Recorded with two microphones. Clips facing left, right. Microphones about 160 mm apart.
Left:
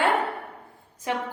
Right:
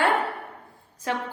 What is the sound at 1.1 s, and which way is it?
Speech, 15° left (ahead or behind).